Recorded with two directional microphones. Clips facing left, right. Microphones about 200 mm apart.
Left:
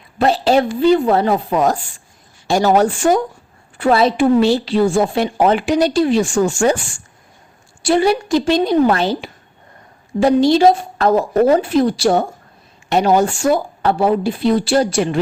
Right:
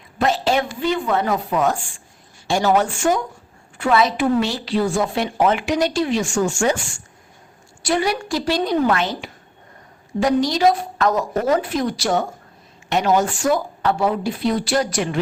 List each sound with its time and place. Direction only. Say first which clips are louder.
0.2 s a woman's voice: left 5 dB; 35° left (ahead or behind)
7.8 s a woman's voice: left 6 dB; 30° left (ahead or behind)